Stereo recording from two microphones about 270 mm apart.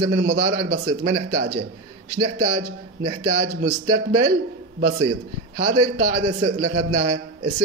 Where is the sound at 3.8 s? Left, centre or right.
Right.